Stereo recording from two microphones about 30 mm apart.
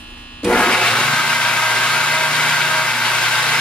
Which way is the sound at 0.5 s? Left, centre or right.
Left.